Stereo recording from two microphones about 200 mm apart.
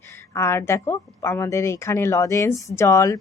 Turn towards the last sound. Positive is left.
turn(degrees=15)  # may be behind; listen again after turning